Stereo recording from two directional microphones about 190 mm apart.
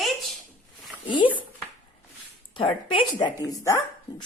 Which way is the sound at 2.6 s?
30° left (ahead or behind).